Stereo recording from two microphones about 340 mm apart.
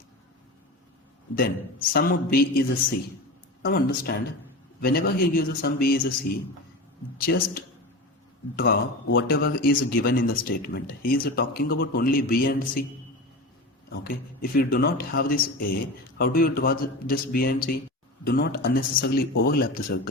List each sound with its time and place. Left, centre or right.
1.9 s speech: left
13.9 s speech: left